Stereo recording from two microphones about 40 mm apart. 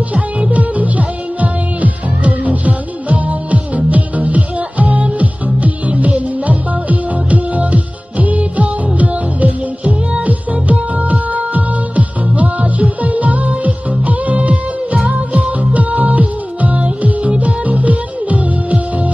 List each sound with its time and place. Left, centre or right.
0.1 s music: right